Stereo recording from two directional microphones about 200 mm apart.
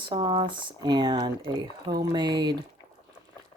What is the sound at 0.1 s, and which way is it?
Speech, 20° right (ahead or behind).